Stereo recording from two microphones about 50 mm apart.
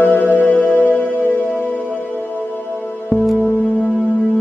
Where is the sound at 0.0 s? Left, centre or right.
Left.